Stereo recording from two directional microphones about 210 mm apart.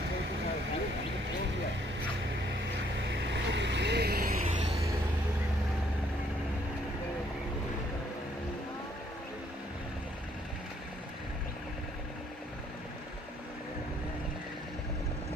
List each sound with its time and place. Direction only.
3.0 s vehicle: 60° right (ahead or behind); by 4.5 s 45° right (ahead or behind)